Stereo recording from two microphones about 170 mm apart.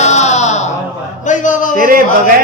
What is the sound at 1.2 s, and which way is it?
Speech, 45° left (ahead or behind).